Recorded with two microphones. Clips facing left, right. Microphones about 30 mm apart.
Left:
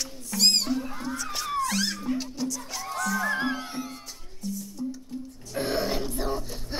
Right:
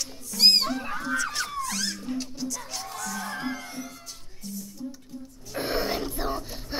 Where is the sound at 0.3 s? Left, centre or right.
Left.